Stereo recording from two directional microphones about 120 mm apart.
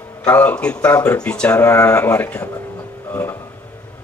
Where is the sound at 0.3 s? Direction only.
15° left (ahead or behind).